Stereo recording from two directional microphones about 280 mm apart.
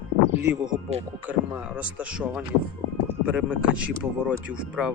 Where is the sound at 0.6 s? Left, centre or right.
Right.